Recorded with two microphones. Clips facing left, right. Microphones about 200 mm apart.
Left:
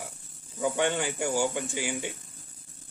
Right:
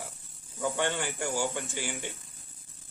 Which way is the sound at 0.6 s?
15° left (ahead or behind).